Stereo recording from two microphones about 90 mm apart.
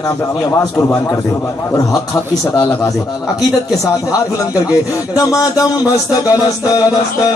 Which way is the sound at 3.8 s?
35° left (ahead or behind).